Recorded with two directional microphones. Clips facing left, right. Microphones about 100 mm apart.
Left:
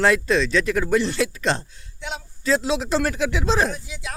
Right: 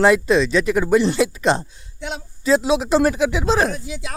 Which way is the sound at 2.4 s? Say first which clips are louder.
Right 5 dB; 10° right (ahead or behind).